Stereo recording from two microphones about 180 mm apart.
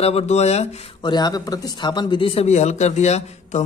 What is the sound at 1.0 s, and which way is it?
Speech, 25° left (ahead or behind).